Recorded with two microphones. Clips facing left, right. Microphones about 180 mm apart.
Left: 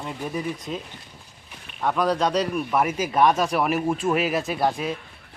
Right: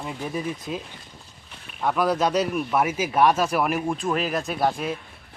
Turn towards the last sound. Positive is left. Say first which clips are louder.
# even
turn(degrees=0)  # may be behind; listen again after turning